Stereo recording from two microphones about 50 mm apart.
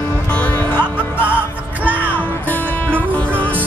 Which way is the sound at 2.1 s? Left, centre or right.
Left.